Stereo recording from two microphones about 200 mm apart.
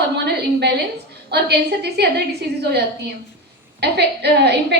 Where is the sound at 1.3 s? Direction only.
55° right (ahead or behind).